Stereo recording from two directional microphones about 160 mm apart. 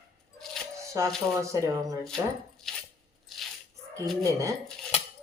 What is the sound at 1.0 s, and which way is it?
Speech, 20° right (ahead or behind).